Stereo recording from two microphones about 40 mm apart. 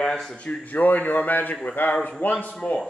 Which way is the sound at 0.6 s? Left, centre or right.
Left.